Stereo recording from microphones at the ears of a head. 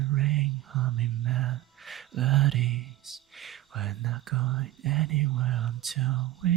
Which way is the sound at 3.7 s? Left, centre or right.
Right.